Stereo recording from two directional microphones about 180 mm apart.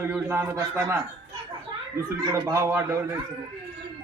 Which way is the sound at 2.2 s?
20° right (ahead or behind).